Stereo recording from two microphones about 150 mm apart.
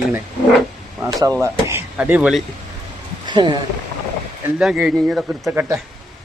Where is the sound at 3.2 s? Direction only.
30° right (ahead or behind).